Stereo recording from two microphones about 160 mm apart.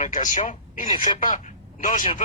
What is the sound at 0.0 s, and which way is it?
Speech, 50° left (ahead or behind).